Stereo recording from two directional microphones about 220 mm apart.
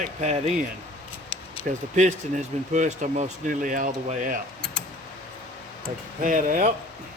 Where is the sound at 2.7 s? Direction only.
35° right (ahead or behind).